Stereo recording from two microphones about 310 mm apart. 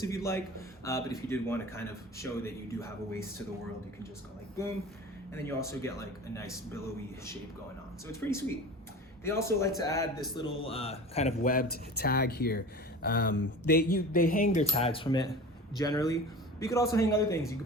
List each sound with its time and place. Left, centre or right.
0.0 s speech: centre
5.3 s speech: centre
8.2 s speech: centre